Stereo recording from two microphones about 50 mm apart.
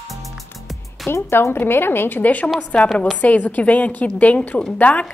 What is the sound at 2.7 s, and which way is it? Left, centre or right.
A woman's voice, left.